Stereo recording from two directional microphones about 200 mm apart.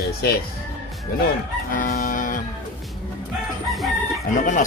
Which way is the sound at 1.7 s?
45° left (ahead or behind).